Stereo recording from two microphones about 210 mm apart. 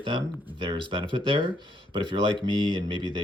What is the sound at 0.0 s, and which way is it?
Speech, 25° right (ahead or behind).